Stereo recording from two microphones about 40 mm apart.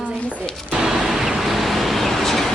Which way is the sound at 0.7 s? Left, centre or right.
Centre.